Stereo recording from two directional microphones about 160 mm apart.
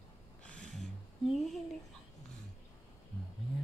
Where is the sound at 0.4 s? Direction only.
5° left (ahead or behind).